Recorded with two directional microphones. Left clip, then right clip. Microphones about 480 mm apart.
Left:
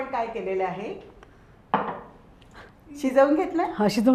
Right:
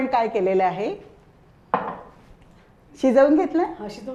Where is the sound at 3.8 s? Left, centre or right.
Left.